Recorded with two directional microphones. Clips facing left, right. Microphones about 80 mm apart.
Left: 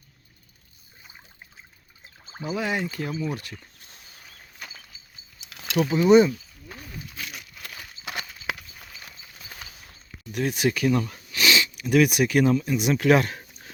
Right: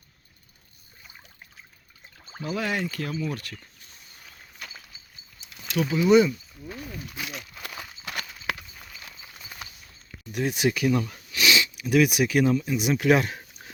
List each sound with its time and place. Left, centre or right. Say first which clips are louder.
2.2 s speech: left 1 dB; centre
5.5 s a sound: left 3 dB; left
5.9 s speech: left 2 dB; left
8.0 s clip-clop: even; centre
10.3 s speech: even; centre